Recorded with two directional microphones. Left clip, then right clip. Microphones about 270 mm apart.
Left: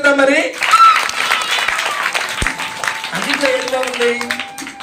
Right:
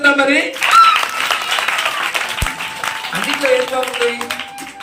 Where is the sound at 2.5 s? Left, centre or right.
Right.